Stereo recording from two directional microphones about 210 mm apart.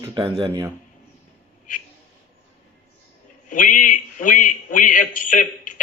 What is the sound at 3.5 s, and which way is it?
A man's voice, 40° left (ahead or behind).